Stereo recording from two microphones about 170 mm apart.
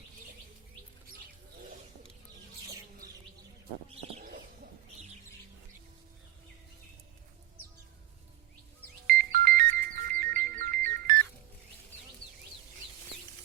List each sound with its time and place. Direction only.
4.2 s bird: 60° right (ahead or behind)
9.0 s music: 60° right (ahead or behind)